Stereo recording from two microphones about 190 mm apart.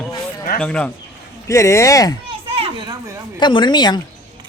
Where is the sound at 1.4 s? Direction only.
15° left (ahead or behind).